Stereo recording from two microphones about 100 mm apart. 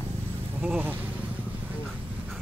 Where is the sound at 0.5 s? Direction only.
15° right (ahead or behind).